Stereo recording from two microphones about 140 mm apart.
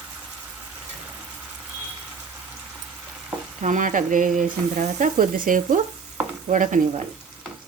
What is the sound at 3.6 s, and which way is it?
Sizzle, 65° right (ahead or behind).